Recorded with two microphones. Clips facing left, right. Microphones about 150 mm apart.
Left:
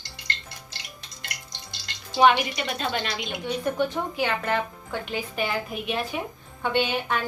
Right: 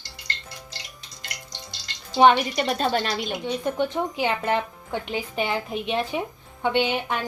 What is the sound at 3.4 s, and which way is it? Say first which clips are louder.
A woman's voice: left 1 dB; 20° right (ahead or behind).